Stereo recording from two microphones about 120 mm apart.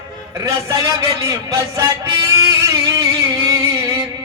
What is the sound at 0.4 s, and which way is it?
A man's voice, 30° right (ahead or behind).